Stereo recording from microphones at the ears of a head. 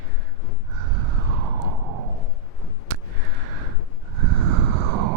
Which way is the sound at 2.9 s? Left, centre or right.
Right.